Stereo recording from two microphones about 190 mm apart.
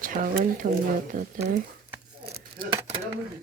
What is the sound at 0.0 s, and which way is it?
Speech, 45° right (ahead or behind).